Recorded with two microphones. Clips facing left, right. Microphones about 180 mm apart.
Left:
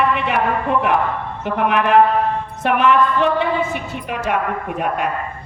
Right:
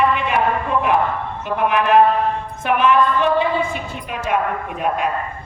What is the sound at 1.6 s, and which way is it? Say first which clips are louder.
A woman's voice: even; 65° left (ahead or behind).